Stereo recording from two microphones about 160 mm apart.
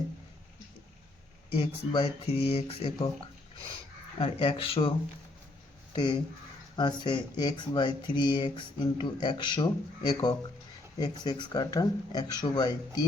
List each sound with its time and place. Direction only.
1.5 s speech: 35° left (ahead or behind)
4.2 s speech: 35° left (ahead or behind)